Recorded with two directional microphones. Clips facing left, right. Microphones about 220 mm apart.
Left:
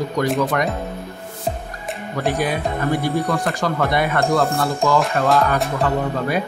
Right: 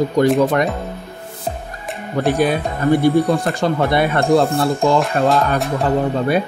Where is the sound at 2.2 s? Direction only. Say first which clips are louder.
Right 5 dB; 25° right (ahead or behind).